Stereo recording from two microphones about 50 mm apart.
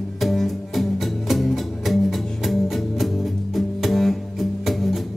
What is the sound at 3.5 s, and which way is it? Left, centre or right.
Music, centre.